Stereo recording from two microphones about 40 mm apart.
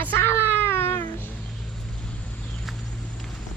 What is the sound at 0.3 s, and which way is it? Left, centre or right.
Cat, left.